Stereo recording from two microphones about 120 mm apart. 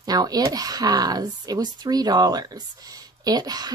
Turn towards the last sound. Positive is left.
turn(degrees=-35)  # may be behind; listen again after turning